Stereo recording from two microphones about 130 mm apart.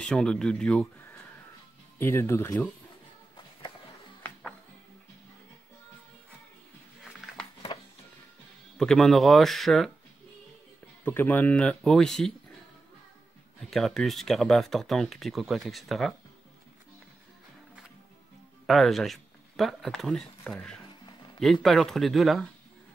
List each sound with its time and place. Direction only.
0.0 s speech: 5° left (ahead or behind)
2.0 s speech: 20° left (ahead or behind)
8.7 s speech: 5° left (ahead or behind)
11.1 s speech: 15° left (ahead or behind)
13.6 s speech: centre (ahead or behind)
18.7 s speech: centre (ahead or behind)